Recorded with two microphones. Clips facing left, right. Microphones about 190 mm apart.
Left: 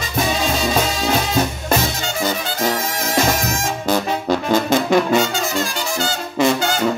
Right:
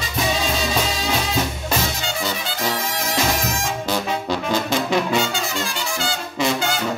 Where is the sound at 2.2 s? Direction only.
45° left (ahead or behind).